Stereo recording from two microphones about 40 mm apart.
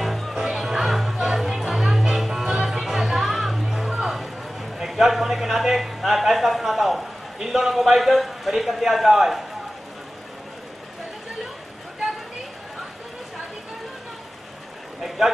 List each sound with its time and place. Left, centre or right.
0.0 s music: centre
3.9 s a sound: centre
7.4 s a man's voice: centre
15.0 s vehicle: centre